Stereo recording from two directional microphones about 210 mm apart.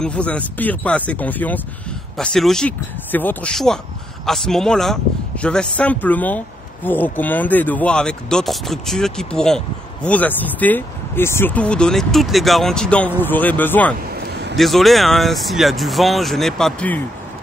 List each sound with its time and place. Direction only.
0.0 s speech: 5° left (ahead or behind)
14.2 s a sound: 50° right (ahead or behind)
14.6 s speech: centre (ahead or behind)